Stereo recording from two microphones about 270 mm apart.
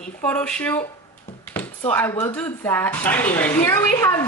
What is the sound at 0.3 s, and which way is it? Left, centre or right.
Speech, centre.